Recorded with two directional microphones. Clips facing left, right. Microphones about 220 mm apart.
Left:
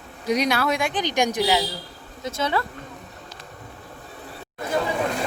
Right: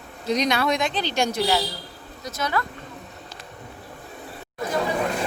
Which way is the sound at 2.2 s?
25° left (ahead or behind).